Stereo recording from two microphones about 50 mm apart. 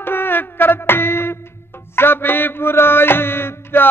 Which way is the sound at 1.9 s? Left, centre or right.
Left.